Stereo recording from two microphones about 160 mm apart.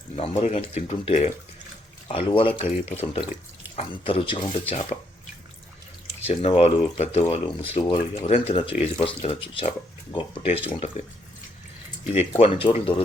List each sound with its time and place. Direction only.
0.2 s speech: 40° left (ahead or behind)
6.2 s speech: 40° left (ahead or behind)
12.1 s speech: 40° left (ahead or behind)